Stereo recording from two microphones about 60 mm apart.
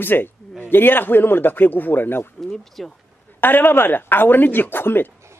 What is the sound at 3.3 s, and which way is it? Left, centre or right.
A man's voice, left.